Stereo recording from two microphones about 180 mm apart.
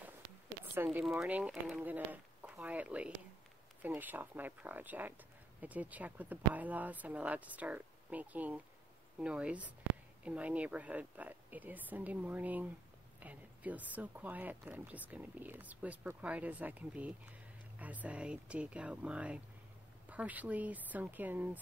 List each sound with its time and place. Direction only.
0.8 s speech: centre (ahead or behind)